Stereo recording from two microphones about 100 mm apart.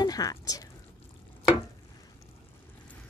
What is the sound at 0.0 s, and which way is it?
Speech, 40° left (ahead or behind).